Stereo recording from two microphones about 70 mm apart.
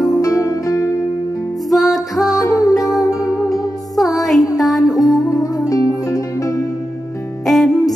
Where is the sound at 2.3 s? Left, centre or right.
Left.